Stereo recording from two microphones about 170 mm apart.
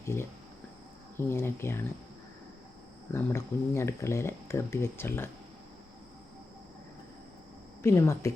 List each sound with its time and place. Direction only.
0.0 s speech: 15° left (ahead or behind)
3.1 s speech: 15° left (ahead or behind)
7.8 s speech: 15° left (ahead or behind)